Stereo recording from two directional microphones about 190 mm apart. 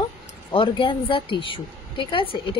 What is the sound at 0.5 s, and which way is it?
A woman's voice, 25° left (ahead or behind).